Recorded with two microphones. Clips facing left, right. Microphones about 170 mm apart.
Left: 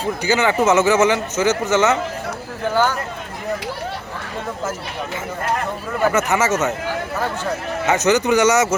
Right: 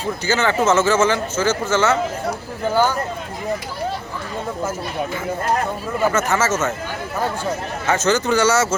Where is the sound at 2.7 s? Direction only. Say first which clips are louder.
Right 1 dB; 10° right (ahead or behind).